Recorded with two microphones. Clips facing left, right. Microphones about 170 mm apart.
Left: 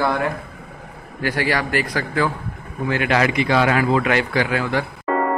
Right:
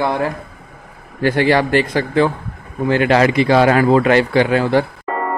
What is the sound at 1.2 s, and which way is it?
A man's voice, 25° right (ahead or behind).